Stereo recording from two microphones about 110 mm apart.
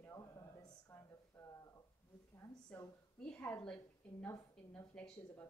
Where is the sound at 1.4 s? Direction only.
15° left (ahead or behind).